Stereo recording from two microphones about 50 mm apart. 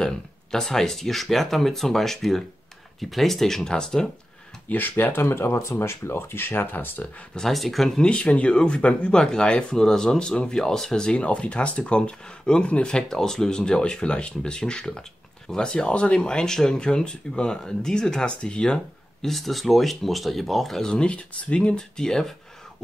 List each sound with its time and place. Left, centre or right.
0.0 s speech: centre
4.6 s speech: left
5.3 s speech: left
7.3 s speech: centre
8.0 s speech: left
19.2 s speech: centre
20.8 s speech: centre